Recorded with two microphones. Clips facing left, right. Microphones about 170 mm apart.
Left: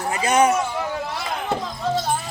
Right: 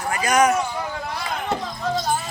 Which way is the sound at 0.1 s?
25° left (ahead or behind).